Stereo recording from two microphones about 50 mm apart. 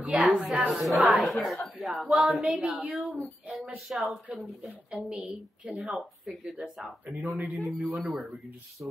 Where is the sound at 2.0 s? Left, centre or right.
Centre.